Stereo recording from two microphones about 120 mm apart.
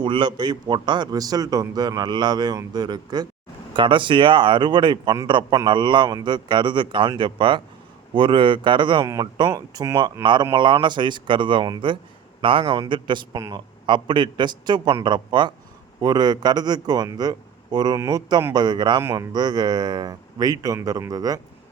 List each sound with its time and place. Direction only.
0.0 s a man's voice: 40° right (ahead or behind)
9.0 s speech: 25° right (ahead or behind)
10.5 s a man's voice: 40° right (ahead or behind)
12.6 s a man's voice: 35° right (ahead or behind)
13.3 s speech: 25° right (ahead or behind)
13.8 s a man's voice: 40° right (ahead or behind)
19.0 s speech: 25° right (ahead or behind)
19.3 s a man's voice: 35° right (ahead or behind)